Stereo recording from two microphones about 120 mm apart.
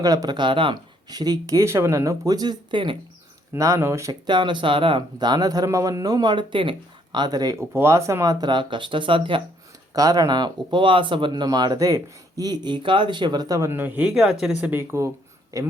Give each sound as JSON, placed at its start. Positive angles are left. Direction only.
{"t": 0.0, "sound": "speech", "side_deg": -30}
{"t": 3.5, "sound": "speech", "side_deg": -25}
{"t": 4.3, "sound": "speech", "side_deg": -40}
{"t": 7.6, "sound": "speech", "side_deg": -20}
{"t": 9.9, "sound": "speech", "side_deg": -30}
{"t": 13.7, "sound": "speech", "side_deg": -15}
{"t": 14.6, "sound": "speech", "side_deg": -15}